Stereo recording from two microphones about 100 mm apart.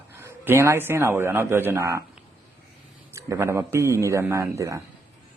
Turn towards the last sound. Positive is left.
turn(degrees=-30)  # may be behind; listen again after turning